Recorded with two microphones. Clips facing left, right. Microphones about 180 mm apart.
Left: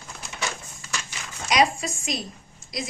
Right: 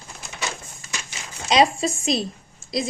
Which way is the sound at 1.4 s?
25° right (ahead or behind).